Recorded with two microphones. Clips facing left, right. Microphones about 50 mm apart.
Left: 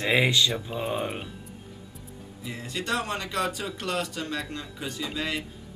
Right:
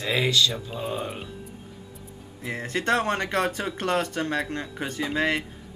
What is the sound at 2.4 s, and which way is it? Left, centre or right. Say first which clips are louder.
Speech: right 6 dB; right.